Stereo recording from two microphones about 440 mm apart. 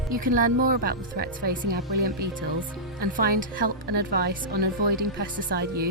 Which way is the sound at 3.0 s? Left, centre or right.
Centre.